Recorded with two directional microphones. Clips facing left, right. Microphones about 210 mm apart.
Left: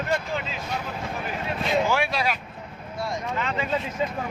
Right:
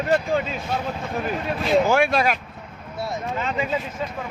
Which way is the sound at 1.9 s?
50° right (ahead or behind).